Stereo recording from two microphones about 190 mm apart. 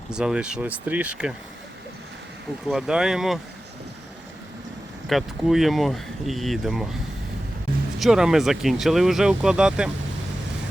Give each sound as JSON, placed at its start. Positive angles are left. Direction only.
{"t": 0.1, "sound": "speech", "side_deg": -5}
{"t": 2.6, "sound": "speech", "side_deg": -5}
{"t": 5.0, "sound": "speech", "side_deg": 0}
{"t": 7.9, "sound": "speech", "side_deg": 0}